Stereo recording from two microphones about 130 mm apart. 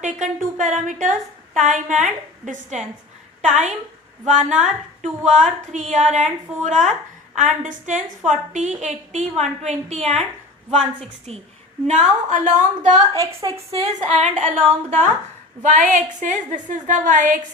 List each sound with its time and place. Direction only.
0.0 s a woman's voice: 70° right (ahead or behind)
7.3 s a woman's voice: 75° right (ahead or behind); by 11.3 s 55° right (ahead or behind)
11.9 s a woman's voice: 65° right (ahead or behind)
13.1 s a woman's voice: 25° right (ahead or behind)
13.7 s a woman's voice: 60° right (ahead or behind)
15.6 s a woman's voice: 70° right (ahead or behind)